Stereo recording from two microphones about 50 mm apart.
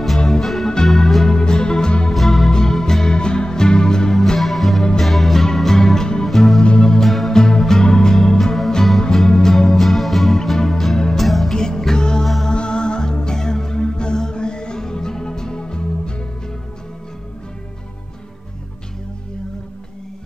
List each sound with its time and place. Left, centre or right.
0.3 s music: centre
1.3 s music: centre
4.4 s music: centre
6.6 s music: centre
7.1 s music: centre
11.5 s music: centre